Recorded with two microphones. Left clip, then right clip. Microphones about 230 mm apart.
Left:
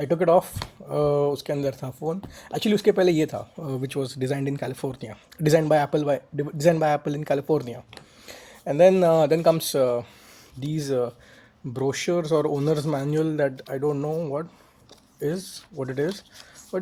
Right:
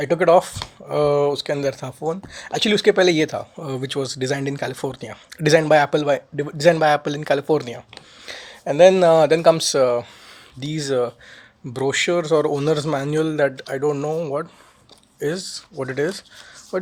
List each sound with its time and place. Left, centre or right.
0.0 s speech: right
3.6 s speech: right
5.5 s speech: right
8.4 s speech: right
10.8 s speech: right
12.5 s speech: right
13.6 s speech: right
15.7 s speech: right